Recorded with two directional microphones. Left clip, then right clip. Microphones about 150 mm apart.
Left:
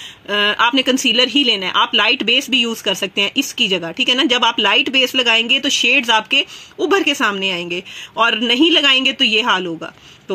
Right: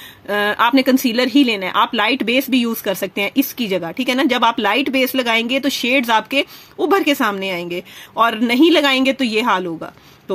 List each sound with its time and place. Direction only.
0.3 s speech: 45° right (ahead or behind)